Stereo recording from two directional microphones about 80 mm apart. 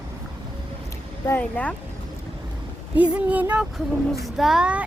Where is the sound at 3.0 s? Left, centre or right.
Centre.